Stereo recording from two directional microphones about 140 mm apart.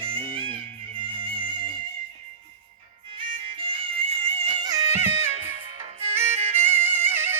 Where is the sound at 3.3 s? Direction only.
40° right (ahead or behind).